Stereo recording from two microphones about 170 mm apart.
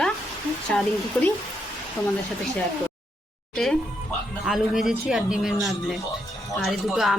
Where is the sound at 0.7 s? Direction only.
5° left (ahead or behind).